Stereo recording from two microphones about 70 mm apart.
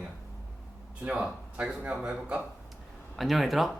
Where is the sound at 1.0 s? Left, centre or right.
Centre.